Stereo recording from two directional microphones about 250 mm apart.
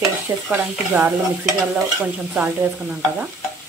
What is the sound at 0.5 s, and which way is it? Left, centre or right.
Stir, centre.